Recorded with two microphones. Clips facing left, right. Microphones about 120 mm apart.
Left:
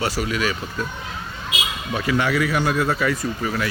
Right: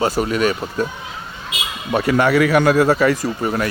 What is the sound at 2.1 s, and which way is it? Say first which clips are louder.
Speech: right 6 dB; 55° right (ahead or behind).